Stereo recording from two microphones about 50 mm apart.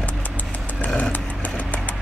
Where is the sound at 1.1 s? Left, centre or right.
Left.